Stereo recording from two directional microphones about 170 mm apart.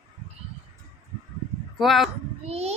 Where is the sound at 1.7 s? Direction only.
Centre (ahead or behind).